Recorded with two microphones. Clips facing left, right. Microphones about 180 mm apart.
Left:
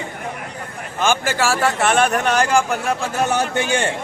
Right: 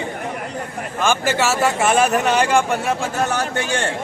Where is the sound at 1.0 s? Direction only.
10° left (ahead or behind).